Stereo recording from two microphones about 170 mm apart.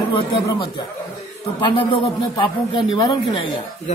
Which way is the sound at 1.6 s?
30° left (ahead or behind).